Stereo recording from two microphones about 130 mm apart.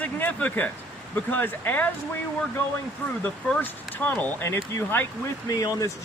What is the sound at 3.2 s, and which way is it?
Speech, 10° left (ahead or behind).